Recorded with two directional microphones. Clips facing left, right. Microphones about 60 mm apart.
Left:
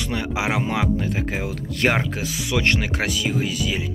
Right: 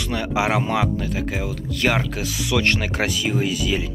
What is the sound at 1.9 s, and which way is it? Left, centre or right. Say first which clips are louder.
Speech: even; centre.